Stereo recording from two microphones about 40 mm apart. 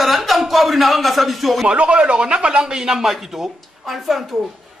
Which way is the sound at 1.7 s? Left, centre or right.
Right.